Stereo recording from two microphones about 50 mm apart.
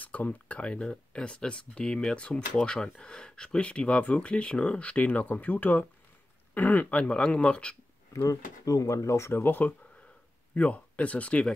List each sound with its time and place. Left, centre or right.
0.0 s speech: left
8.1 s speech: left
9.4 s speech: left